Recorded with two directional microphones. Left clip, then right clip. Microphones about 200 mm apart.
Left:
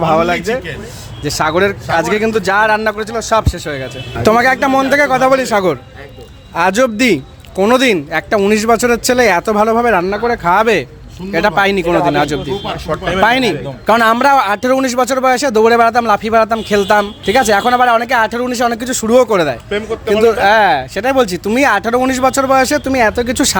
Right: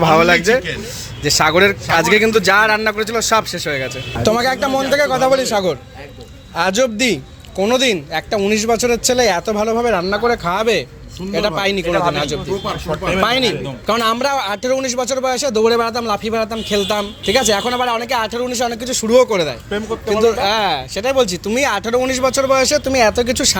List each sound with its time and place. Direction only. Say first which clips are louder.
0.0 s speech: right 1 dB; 5° left (ahead or behind)
4.2 s a man's voice: left 5 dB; 45° left (ahead or behind)